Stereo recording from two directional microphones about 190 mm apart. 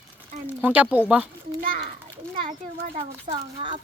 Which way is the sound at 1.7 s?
50° right (ahead or behind).